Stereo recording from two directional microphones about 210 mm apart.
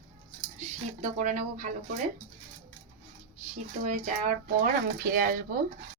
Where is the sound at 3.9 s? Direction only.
35° right (ahead or behind).